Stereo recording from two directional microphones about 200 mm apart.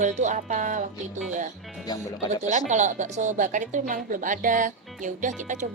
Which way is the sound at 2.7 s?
35° right (ahead or behind).